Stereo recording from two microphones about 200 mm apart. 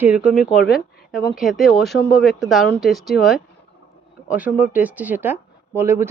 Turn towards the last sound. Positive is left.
turn(degrees=-10)  # may be behind; listen again after turning